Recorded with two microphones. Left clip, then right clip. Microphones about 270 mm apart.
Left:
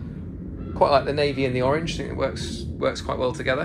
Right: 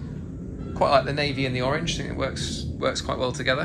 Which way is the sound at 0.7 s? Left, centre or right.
Centre.